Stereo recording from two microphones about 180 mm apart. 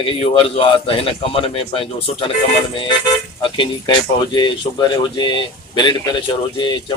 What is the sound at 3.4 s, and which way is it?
Speech, 25° left (ahead or behind).